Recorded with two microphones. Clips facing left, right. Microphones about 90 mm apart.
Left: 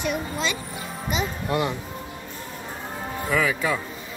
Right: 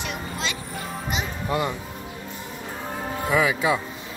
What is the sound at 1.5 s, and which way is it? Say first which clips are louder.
Speech: even; centre (ahead or behind).